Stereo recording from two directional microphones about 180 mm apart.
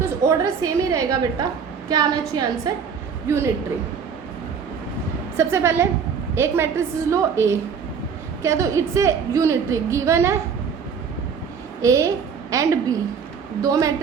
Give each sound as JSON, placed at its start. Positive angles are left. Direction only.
{"t": 0.2, "sound": "a woman's voice", "side_deg": -15}
{"t": 5.4, "sound": "a woman's voice", "side_deg": -15}
{"t": 11.8, "sound": "a woman's voice", "side_deg": -15}